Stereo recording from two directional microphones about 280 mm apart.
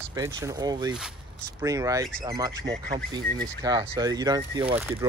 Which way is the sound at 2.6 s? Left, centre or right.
Right.